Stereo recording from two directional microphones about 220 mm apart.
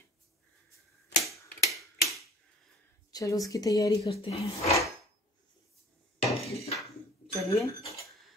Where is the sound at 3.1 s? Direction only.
15° left (ahead or behind).